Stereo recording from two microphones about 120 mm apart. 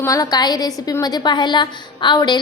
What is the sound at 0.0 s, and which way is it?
A woman's voice, 30° left (ahead or behind).